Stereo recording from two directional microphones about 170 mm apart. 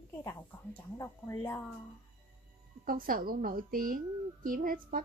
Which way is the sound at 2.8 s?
55° right (ahead or behind).